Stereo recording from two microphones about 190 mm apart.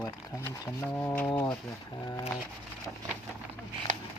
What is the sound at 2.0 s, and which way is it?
Speech, 20° left (ahead or behind).